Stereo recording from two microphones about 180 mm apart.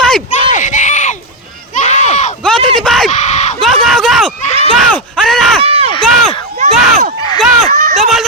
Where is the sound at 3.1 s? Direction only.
40° left (ahead or behind).